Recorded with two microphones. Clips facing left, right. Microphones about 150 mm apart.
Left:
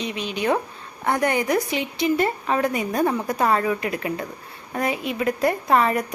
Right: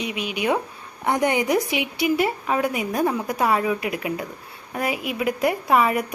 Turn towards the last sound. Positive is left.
turn(degrees=-5)  # may be behind; listen again after turning